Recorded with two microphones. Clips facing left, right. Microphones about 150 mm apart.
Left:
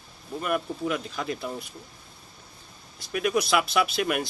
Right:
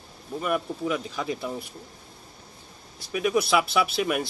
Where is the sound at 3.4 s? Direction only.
5° right (ahead or behind).